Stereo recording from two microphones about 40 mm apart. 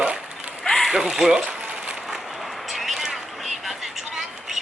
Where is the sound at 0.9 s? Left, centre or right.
Right.